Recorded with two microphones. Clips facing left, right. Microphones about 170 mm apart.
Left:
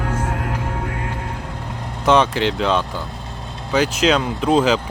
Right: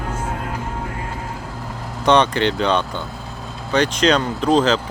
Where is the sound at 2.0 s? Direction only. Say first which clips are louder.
Even; 5° left (ahead or behind).